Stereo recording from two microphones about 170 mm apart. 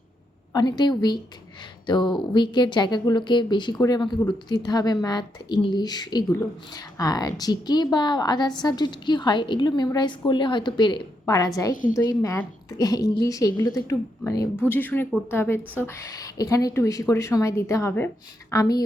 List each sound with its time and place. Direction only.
0.5 s a woman's voice: 25° left (ahead or behind)